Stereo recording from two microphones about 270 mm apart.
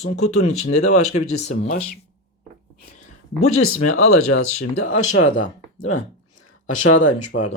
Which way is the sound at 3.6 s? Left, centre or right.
Left.